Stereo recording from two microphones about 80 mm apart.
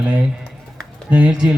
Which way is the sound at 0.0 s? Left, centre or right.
Centre.